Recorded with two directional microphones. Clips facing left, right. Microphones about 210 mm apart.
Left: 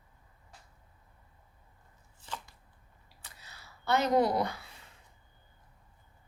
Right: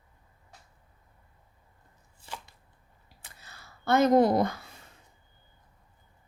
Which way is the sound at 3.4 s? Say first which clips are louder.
Right 4 dB; 50° right (ahead or behind).